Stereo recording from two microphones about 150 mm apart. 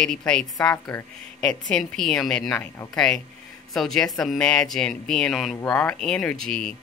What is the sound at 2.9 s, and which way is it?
Speech, 5° left (ahead or behind).